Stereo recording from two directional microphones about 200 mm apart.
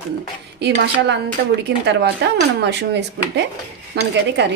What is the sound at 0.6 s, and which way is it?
Speech, 60° right (ahead or behind).